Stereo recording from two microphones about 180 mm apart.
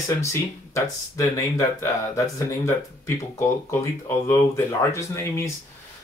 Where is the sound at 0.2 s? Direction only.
15° left (ahead or behind).